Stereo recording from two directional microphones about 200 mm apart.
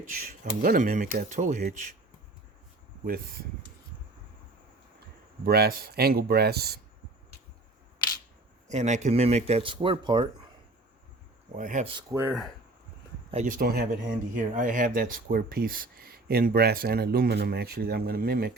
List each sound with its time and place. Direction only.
0.6 s speech: 45° right (ahead or behind)
3.0 s speech: 50° right (ahead or behind)
5.5 s speech: 50° right (ahead or behind)
8.7 s speech: 35° right (ahead or behind)
11.5 s speech: 40° right (ahead or behind)
12.1 s speech: 10° right (ahead or behind)
13.3 s speech: 40° right (ahead or behind)